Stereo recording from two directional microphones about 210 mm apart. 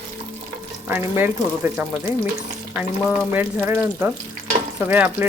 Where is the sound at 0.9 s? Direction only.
10° right (ahead or behind).